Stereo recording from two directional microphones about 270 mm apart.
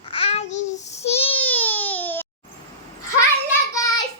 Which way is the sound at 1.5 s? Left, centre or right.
Centre.